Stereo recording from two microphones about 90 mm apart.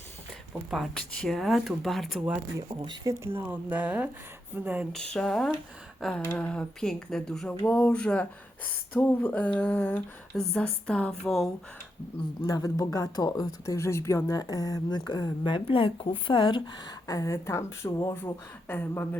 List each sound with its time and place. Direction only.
0.7 s speech: centre (ahead or behind)
1.1 s speech: 10° left (ahead or behind)
1.4 s speech: centre (ahead or behind)
2.6 s speech: 55° right (ahead or behind)
3.3 s speech: 20° right (ahead or behind)
4.9 s speech: 10° left (ahead or behind)
6.0 s a sound: 10° left (ahead or behind)
6.3 s speech: 10° left (ahead or behind)
12.5 s speech: 40° left (ahead or behind)
13.7 s speech: 30° left (ahead or behind)
18.1 s speech: 25° left (ahead or behind)